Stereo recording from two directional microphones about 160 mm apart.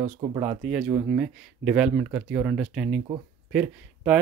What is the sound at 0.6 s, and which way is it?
Speech, 5° right (ahead or behind).